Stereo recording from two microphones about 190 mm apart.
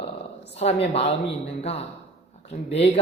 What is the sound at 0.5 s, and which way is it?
A woman's voice, 35° left (ahead or behind).